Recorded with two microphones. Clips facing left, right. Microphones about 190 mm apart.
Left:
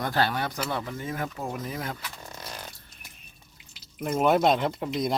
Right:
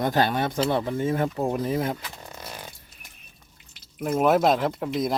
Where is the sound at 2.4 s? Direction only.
10° right (ahead or behind).